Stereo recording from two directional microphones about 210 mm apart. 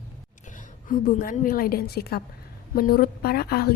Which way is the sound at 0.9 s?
40° left (ahead or behind).